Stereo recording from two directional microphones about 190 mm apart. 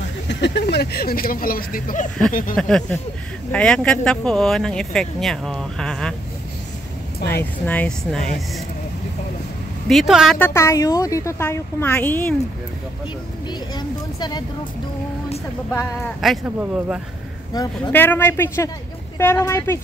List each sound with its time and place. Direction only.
0.3 s speech: 65° left (ahead or behind); by 2.0 s 45° left (ahead or behind)
2.5 s speech: 5° left (ahead or behind)
7.2 s speech: 60° left (ahead or behind)
7.6 s speech: 10° left (ahead or behind)
9.8 s speech: centre (ahead or behind)
10.4 s a woman's voice: 15° left (ahead or behind)
13.5 s speech: 20° left (ahead or behind)
15.7 s a woman's voice: 15° left (ahead or behind)
16.2 s speech: 5° right (ahead or behind)
17.5 s a woman's voice: 20° left (ahead or behind)